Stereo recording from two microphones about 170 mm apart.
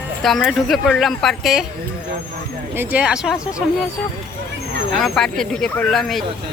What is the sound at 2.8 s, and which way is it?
Speech, 10° right (ahead or behind).